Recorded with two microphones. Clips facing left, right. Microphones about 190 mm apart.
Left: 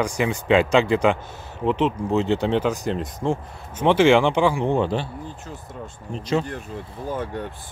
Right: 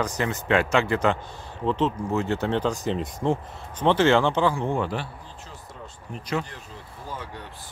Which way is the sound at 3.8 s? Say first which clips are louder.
Left 3 dB; 10° left (ahead or behind).